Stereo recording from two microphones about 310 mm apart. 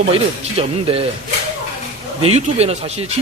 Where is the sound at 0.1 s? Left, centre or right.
Centre.